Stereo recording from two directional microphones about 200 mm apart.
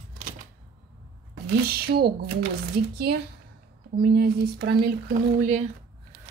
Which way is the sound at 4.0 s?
50° right (ahead or behind).